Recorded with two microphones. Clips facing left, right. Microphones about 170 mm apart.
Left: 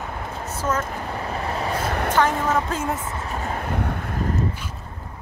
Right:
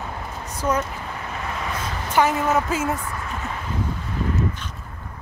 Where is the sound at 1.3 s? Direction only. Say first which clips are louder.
Left 3 dB; 35° left (ahead or behind).